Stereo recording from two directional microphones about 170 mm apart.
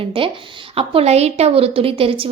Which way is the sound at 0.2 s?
30° right (ahead or behind).